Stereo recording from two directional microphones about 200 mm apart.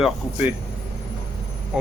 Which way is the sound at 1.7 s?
Centre (ahead or behind).